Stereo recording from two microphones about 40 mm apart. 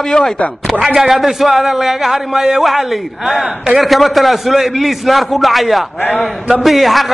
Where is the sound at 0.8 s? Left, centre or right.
Centre.